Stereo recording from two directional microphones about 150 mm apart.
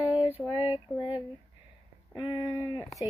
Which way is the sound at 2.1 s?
30° left (ahead or behind).